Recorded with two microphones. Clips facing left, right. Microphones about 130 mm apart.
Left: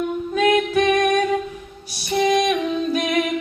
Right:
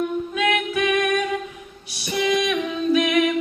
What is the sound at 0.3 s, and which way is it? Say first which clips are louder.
Music: left 7 dB; 40° left (ahead or behind).